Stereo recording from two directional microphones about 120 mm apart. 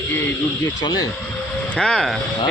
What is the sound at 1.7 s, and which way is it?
Speech, 5° left (ahead or behind).